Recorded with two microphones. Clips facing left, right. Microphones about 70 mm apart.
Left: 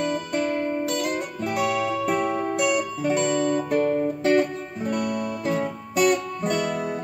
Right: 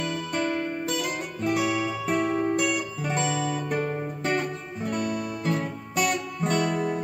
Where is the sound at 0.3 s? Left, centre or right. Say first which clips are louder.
Left 3 dB; centre.